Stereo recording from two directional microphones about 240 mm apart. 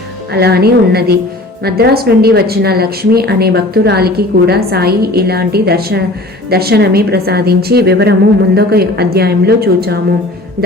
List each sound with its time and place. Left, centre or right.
0.3 s a woman's voice: right